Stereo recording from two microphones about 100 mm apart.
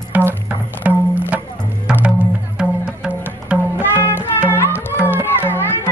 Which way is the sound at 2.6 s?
10° right (ahead or behind).